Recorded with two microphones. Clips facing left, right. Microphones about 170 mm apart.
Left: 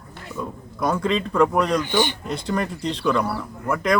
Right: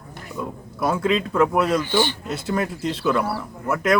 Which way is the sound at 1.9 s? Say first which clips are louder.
Even; 15° left (ahead or behind).